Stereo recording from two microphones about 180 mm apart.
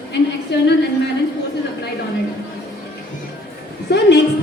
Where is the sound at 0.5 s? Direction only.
70° left (ahead or behind).